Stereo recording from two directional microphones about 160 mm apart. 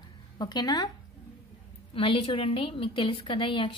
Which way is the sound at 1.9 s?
35° left (ahead or behind).